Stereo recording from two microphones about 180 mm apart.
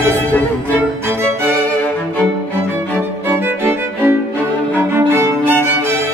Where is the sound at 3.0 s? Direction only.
15° right (ahead or behind).